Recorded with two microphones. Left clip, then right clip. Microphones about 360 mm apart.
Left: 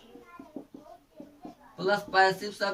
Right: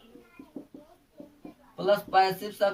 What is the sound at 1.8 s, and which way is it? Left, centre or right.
Speech, centre.